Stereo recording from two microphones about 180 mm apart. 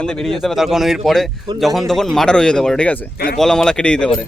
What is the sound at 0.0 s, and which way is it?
Speech, 5° left (ahead or behind).